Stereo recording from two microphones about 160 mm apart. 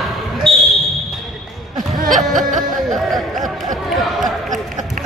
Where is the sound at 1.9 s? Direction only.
55° right (ahead or behind).